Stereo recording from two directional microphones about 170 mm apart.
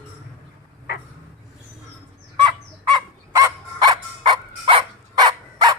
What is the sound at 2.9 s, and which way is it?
Dog, 20° right (ahead or behind).